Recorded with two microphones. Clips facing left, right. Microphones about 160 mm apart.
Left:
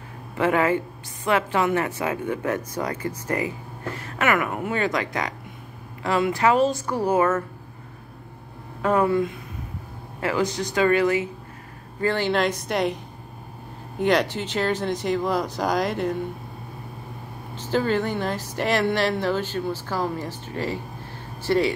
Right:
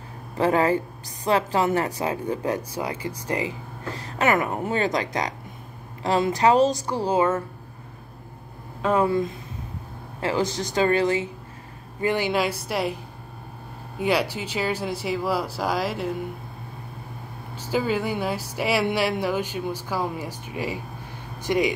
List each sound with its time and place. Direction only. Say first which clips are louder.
0.4 s a woman's voice: even; 35° right (ahead or behind)
2.8 s a woman's voice: left 1 dB; 10° right (ahead or behind)
4.0 s a woman's voice: right 1 dB; 30° right (ahead or behind)
6.0 s a woman's voice: right 1 dB; 35° right (ahead or behind)
8.8 s speech: left 1 dB; 20° right (ahead or behind)
9.1 s a woman's voice: left 1 dB; 35° right (ahead or behind)
12.0 s a woman's voice: left 1 dB; 15° right (ahead or behind)
17.6 s a woman's voice: left 2 dB; 10° right (ahead or behind)